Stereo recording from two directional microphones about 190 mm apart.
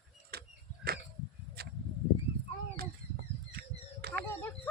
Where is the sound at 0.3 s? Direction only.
55° right (ahead or behind).